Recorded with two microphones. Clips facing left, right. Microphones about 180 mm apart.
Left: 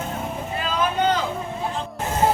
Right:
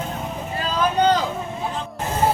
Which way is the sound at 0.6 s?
40° right (ahead or behind).